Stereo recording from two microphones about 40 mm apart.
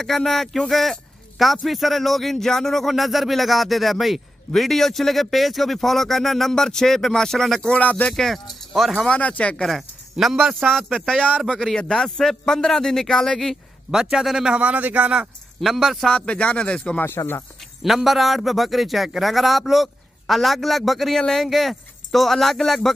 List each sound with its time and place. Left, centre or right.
0.0 s a man's voice: centre
7.8 s speech: left
8.1 s speech: centre
9.0 s speech: left
10.3 s a man's voice: centre
13.8 s a man's voice: centre
14.6 s speech: right
15.6 s a man's voice: centre
16.1 s speech: left
17.0 s speech: left
17.8 s a man's voice: centre